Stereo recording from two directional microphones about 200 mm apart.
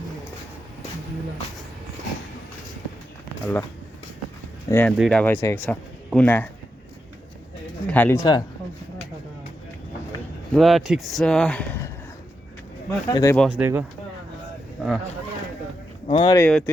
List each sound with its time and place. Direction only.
3.4 s speech: 10° left (ahead or behind)
4.7 s speech: 10° left (ahead or behind)
7.9 s speech: 10° left (ahead or behind)
10.5 s speech: centre (ahead or behind)
13.1 s speech: 15° left (ahead or behind)
13.3 s speech: 5° left (ahead or behind)
13.6 s speech: 10° right (ahead or behind)
16.0 s speech: 25° left (ahead or behind)
16.4 s speech: 5° left (ahead or behind)